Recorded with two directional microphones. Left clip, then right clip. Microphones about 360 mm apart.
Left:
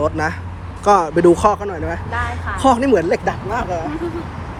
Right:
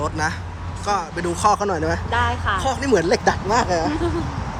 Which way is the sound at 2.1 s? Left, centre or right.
Right.